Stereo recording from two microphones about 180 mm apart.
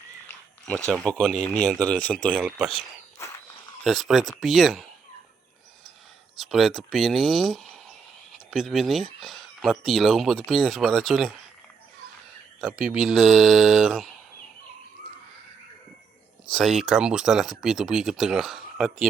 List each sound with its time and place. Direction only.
0.9 s speech: 5° left (ahead or behind)
2.4 s speech: 5° right (ahead or behind)
3.8 s speech: centre (ahead or behind)
6.3 s speech: centre (ahead or behind)
12.5 s speech: 5° right (ahead or behind)
16.5 s speech: centre (ahead or behind)